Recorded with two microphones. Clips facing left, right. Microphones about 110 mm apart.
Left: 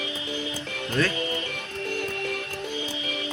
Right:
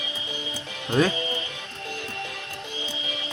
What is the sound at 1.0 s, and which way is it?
Music, 15° right (ahead or behind).